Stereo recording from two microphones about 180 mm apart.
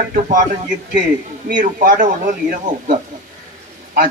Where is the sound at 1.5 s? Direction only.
45° right (ahead or behind).